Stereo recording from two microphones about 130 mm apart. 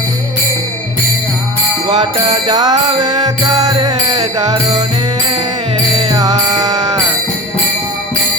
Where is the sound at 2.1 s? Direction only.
35° right (ahead or behind).